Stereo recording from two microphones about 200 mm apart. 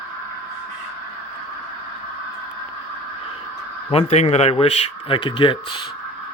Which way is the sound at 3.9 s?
35° left (ahead or behind).